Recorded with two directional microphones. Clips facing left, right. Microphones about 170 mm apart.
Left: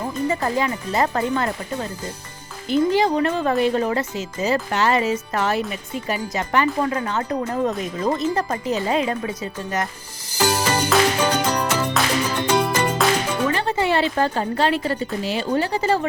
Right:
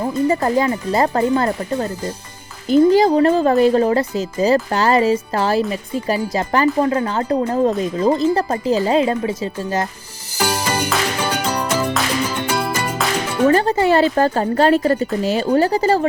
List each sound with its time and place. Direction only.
0.3 s speech: 35° right (ahead or behind)
10.4 s music: 10° right (ahead or behind)
13.5 s speech: 40° right (ahead or behind)